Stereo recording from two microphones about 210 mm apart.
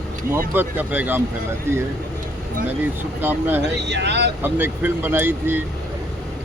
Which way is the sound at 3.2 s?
10° right (ahead or behind).